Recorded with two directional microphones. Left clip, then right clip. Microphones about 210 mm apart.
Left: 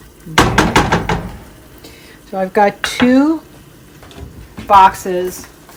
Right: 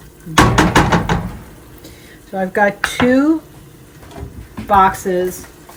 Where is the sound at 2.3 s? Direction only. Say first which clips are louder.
Left 2 dB; 50° left (ahead or behind).